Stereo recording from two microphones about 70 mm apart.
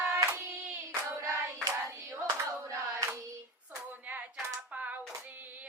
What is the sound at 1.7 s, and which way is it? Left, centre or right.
Hands, right.